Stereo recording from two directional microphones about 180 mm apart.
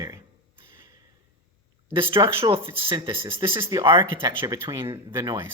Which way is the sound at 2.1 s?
30° right (ahead or behind).